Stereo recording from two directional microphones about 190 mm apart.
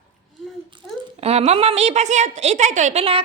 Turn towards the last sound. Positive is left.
turn(degrees=-30)  # may be behind; listen again after turning